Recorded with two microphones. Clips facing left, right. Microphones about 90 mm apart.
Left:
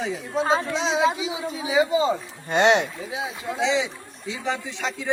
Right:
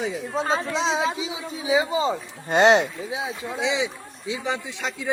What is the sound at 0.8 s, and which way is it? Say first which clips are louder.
Speech: even; 35° right (ahead or behind).